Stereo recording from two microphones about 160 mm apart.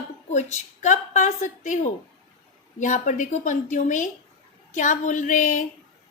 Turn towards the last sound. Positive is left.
turn(degrees=55)  # may be behind; listen again after turning